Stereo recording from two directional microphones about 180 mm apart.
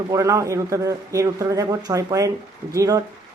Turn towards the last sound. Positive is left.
turn(degrees=-20)  # may be behind; listen again after turning